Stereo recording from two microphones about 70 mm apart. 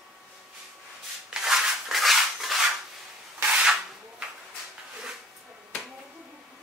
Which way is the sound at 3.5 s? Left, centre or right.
Centre.